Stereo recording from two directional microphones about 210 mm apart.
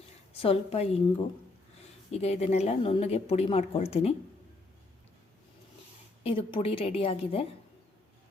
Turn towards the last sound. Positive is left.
turn(degrees=25)  # may be behind; listen again after turning